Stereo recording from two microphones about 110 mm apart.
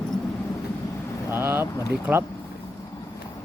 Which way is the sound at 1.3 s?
20° right (ahead or behind).